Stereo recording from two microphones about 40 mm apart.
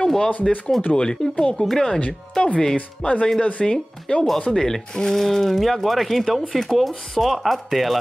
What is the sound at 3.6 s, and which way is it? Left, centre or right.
Speech, left.